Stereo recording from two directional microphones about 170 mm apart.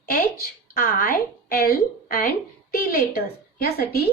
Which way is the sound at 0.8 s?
60° left (ahead or behind).